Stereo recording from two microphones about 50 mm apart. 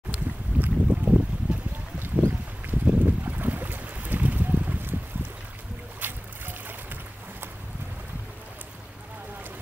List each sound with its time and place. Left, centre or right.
0.1 s boat: right
2.2 s boat: right
5.9 s boat: right